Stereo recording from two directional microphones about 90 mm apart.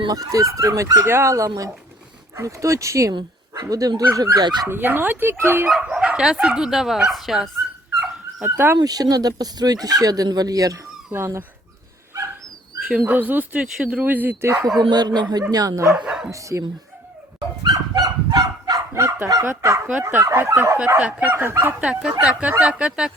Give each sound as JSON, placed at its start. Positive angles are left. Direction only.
{"t": 0.0, "sound": "speech", "side_deg": -45}
{"t": 3.1, "sound": "speech", "side_deg": -50}
{"t": 4.7, "sound": "speech", "side_deg": -20}
{"t": 5.6, "sound": "speech", "side_deg": -10}
{"t": 8.4, "sound": "speech", "side_deg": -25}
{"t": 8.8, "sound": "speech", "side_deg": -45}
{"t": 11.1, "sound": "speech", "side_deg": -25}
{"t": 13.1, "sound": "speech", "side_deg": -20}
{"t": 14.8, "sound": "speech", "side_deg": -50}
{"t": 16.0, "sound": "speech", "side_deg": -10}
{"t": 16.3, "sound": "speech", "side_deg": -35}
{"t": 17.6, "sound": "fowl", "side_deg": -45}
{"t": 20.0, "sound": "speech", "side_deg": -25}
{"t": 21.0, "sound": "speech", "side_deg": -15}